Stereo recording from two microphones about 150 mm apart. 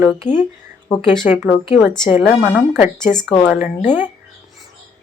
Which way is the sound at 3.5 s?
10° right (ahead or behind).